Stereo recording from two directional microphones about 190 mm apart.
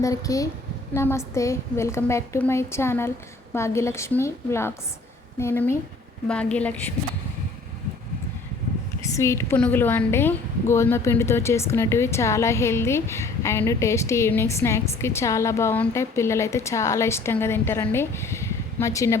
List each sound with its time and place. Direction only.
0.0 s a woman's voice: 20° left (ahead or behind)
9.0 s a woman's voice: 15° left (ahead or behind)